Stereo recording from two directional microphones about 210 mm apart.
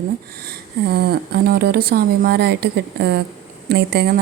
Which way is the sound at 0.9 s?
50° right (ahead or behind).